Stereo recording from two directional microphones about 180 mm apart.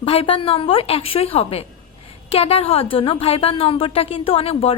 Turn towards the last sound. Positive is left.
turn(degrees=30)  # may be behind; listen again after turning